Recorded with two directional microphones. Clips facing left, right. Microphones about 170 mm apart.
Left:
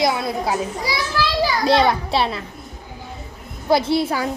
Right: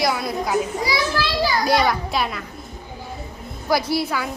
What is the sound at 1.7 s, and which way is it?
Speech, 25° left (ahead or behind).